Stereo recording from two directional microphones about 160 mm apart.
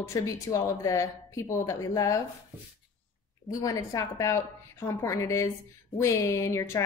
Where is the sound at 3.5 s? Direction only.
20° left (ahead or behind).